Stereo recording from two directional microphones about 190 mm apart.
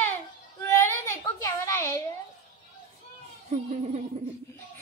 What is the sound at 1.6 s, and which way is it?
Speech, 15° left (ahead or behind).